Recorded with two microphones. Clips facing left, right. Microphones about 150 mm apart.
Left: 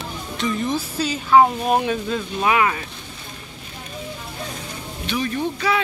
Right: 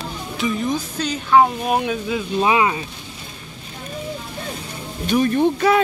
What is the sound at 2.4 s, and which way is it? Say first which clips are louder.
Speech: right 1 dB; 20° right (ahead or behind).